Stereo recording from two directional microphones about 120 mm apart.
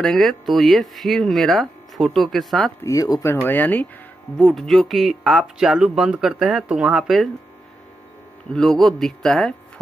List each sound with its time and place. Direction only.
0.0 s speech: 5° left (ahead or behind)
2.8 s speech: 30° left (ahead or behind)
3.3 s speech: 15° left (ahead or behind)
4.4 s speech: centre (ahead or behind)
8.5 s speech: 5° left (ahead or behind)